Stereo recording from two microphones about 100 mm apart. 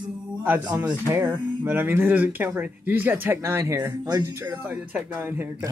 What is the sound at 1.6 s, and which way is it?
Speech, 20° right (ahead or behind).